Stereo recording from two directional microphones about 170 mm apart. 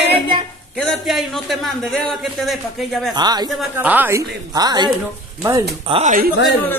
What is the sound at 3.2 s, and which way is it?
Speech, 25° right (ahead or behind).